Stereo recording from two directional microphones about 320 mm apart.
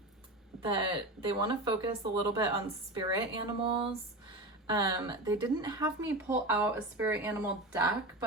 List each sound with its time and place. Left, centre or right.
0.6 s speech: centre